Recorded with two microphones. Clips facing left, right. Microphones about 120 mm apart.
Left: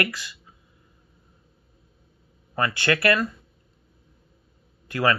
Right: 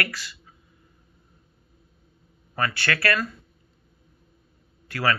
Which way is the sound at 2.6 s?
20° left (ahead or behind).